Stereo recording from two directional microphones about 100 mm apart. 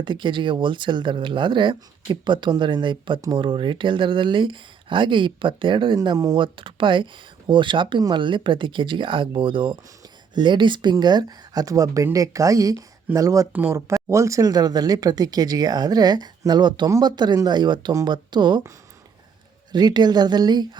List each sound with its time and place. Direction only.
0.0 s speech: 55° right (ahead or behind)
3.2 s speech: 40° right (ahead or behind)
3.4 s speech: 55° right (ahead or behind)
6.0 s speech: 40° right (ahead or behind)
6.4 s speech: 55° right (ahead or behind); by 13.5 s 35° right (ahead or behind)
13.5 s speech: 15° right (ahead or behind)
13.7 s speech: 30° right (ahead or behind); by 18.6 s 50° right (ahead or behind)
19.7 s speech: 45° right (ahead or behind)